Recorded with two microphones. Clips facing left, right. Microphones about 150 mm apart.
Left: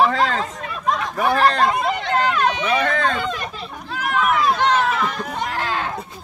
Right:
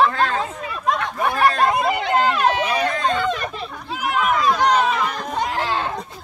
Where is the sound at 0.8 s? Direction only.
Centre (ahead or behind).